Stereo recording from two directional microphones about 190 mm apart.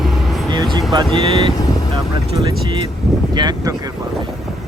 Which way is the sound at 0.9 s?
25° right (ahead or behind).